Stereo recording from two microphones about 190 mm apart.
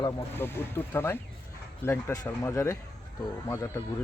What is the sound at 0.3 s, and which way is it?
Speech, 10° left (ahead or behind).